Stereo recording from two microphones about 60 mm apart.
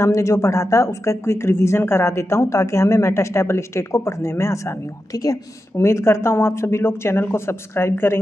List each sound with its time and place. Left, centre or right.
0.0 s speech: left
5.1 s a woman's voice: left
5.8 s speech: left